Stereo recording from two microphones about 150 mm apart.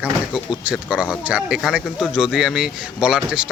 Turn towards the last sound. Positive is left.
turn(degrees=-5)  # may be behind; listen again after turning